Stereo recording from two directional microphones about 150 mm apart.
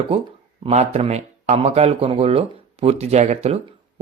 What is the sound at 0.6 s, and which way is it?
Speech, 45° right (ahead or behind).